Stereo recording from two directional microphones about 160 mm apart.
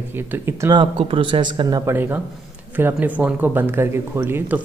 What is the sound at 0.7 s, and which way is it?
Speech, 35° right (ahead or behind).